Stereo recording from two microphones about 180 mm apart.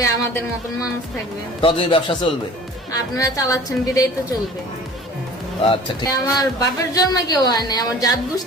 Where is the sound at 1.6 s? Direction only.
30° left (ahead or behind).